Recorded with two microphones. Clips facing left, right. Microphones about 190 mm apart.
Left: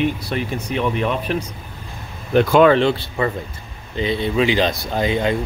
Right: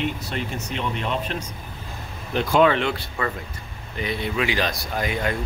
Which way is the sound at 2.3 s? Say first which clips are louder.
Left 6 dB; 55° left (ahead or behind).